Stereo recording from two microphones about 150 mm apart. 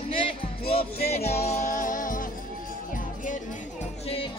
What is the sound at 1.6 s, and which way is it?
Music, 60° left (ahead or behind).